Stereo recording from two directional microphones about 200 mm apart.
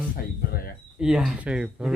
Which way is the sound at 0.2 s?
50° left (ahead or behind).